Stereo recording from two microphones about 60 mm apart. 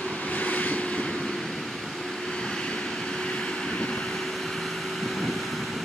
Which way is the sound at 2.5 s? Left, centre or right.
Centre.